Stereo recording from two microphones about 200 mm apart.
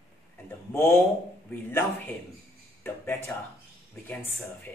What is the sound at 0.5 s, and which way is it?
Speech, 10° left (ahead or behind).